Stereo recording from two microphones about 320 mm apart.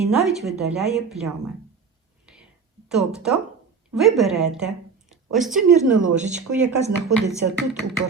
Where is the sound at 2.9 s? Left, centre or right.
Centre.